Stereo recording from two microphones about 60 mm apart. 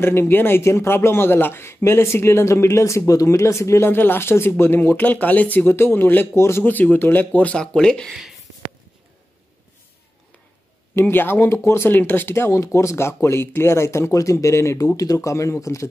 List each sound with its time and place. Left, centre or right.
0.0 s a man's voice: left
3.1 s speech: left
3.9 s speech: left
5.8 s speech: left
6.3 s a man's voice: left
6.6 s speech: left
7.5 s speech: centre
8.1 s speech: centre
11.0 s speech: left
11.4 s a man's voice: left
11.9 s a man's voice: left
15.0 s speech: left